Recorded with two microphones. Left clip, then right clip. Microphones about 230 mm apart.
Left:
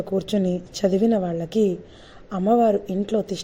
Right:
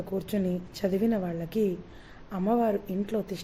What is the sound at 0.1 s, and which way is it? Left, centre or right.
A woman's voice, left.